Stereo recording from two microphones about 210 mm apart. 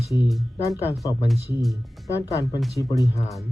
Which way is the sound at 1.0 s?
15° left (ahead or behind).